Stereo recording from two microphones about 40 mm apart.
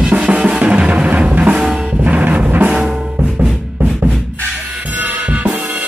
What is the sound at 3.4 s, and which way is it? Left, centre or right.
Music, centre.